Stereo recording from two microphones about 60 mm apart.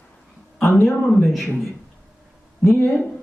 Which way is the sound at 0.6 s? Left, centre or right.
Centre.